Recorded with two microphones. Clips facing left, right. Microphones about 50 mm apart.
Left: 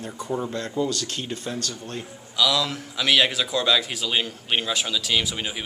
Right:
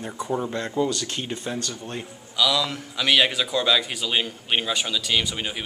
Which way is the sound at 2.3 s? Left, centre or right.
Centre.